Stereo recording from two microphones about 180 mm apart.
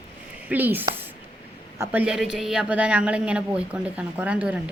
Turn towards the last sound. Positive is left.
turn(degrees=-5)  # may be behind; listen again after turning